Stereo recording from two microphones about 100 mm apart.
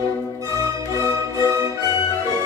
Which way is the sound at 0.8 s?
30° left (ahead or behind).